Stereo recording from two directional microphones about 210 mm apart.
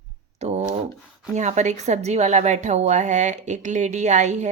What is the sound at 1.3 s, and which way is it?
A woman's voice, 35° right (ahead or behind).